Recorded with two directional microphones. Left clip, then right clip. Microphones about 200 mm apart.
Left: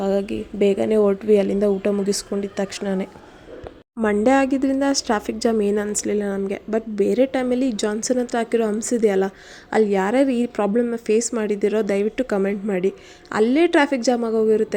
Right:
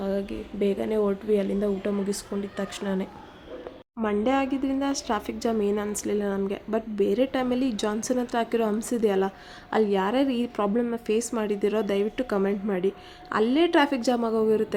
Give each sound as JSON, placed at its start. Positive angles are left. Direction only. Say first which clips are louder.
{"t": 0.0, "sound": "a woman's voice", "louder": "left 7 dB", "side_deg": 35}